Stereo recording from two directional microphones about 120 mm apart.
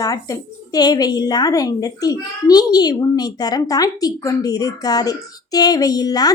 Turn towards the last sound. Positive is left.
turn(degrees=30)  # may be behind; listen again after turning